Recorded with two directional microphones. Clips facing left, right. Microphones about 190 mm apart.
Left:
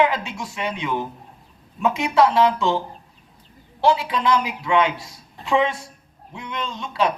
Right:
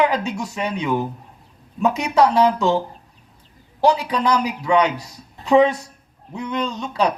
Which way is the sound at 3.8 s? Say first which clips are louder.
Right 2 dB; 40° right (ahead or behind).